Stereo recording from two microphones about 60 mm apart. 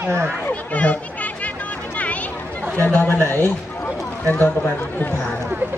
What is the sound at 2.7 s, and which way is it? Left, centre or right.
Speech, left.